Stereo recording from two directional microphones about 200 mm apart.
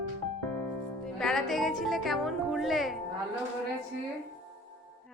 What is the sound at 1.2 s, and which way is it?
Speech, centre (ahead or behind).